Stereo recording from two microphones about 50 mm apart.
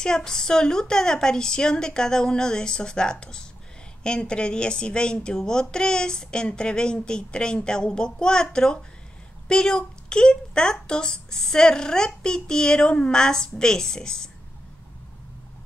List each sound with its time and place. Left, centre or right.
0.0 s a woman's voice: centre